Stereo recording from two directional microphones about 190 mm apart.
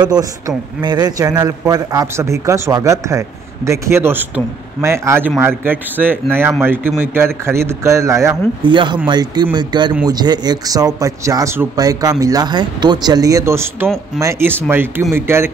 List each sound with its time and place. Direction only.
0.0 s a man's voice: 20° right (ahead or behind)